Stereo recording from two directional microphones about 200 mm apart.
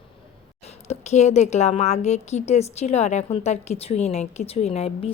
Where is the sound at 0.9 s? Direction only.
35° left (ahead or behind).